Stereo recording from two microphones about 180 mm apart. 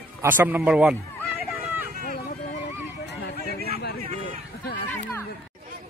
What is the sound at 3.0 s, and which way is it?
Chatter, 65° left (ahead or behind).